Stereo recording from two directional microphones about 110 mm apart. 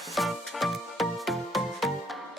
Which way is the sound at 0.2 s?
Centre (ahead or behind).